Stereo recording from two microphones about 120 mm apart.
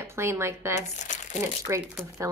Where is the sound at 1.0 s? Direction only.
85° left.